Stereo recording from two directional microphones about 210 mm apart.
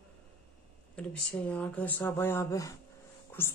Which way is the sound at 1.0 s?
5° left (ahead or behind).